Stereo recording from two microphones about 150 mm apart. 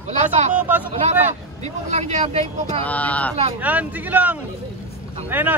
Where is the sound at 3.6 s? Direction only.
10° right (ahead or behind).